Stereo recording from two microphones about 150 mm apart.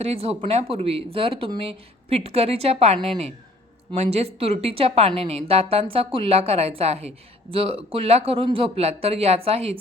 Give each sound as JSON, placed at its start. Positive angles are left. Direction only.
{"t": 0.0, "sound": "a woman's voice", "side_deg": -45}